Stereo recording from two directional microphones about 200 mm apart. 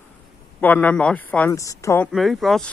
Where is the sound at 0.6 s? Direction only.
10° left (ahead or behind).